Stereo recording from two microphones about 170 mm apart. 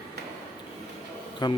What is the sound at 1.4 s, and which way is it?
Speech, 25° left (ahead or behind).